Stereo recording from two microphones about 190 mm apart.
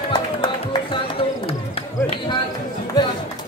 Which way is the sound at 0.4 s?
25° left (ahead or behind).